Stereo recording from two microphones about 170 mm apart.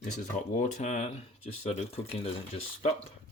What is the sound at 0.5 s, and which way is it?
Speech, 45° left (ahead or behind).